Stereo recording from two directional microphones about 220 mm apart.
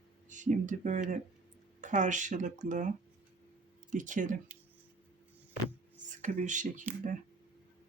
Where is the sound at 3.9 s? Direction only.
35° right (ahead or behind).